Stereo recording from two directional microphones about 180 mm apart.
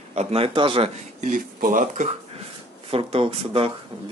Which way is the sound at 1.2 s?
50° right (ahead or behind).